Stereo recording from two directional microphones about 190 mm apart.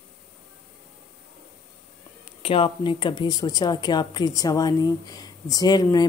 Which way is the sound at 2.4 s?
30° left (ahead or behind).